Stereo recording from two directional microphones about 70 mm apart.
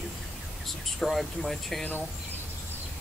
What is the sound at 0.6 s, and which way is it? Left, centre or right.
Speech, centre.